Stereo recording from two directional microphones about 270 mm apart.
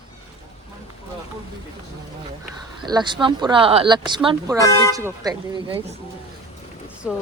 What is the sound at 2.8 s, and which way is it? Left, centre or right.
Speech, centre.